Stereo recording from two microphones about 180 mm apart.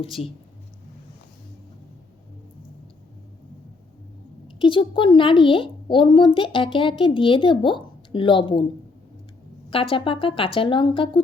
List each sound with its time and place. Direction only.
4.4 s a woman's voice: 30° left (ahead or behind)
9.6 s speech: 30° left (ahead or behind)